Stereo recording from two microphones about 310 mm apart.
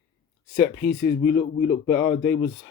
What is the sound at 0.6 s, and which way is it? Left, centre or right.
Speech, left.